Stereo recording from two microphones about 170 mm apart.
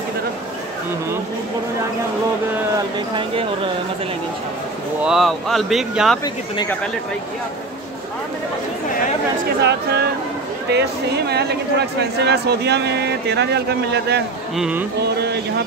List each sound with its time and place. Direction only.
5.0 s speech: centre (ahead or behind)
6.2 s speech: 25° left (ahead or behind)
9.6 s speech: 80° right
14.6 s speech: 10° right (ahead or behind)
15.0 s speech: 75° right (ahead or behind)